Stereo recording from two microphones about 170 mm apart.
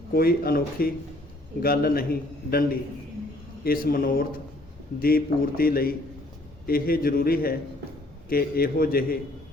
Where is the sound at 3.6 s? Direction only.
60° left (ahead or behind).